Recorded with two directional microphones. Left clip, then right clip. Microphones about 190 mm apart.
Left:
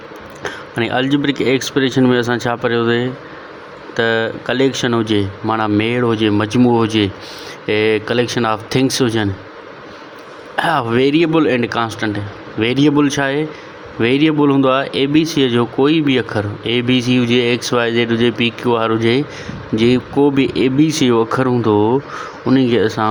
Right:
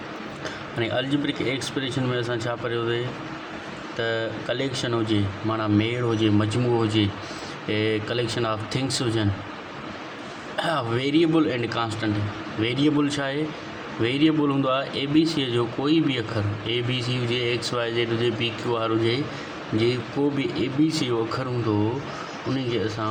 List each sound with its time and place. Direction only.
0.4 s speech: 35° left (ahead or behind)
10.6 s speech: 35° left (ahead or behind)
22.5 s speech: 40° left (ahead or behind)